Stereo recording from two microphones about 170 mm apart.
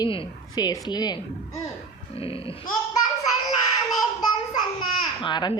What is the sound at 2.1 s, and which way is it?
Sheep, 35° left (ahead or behind).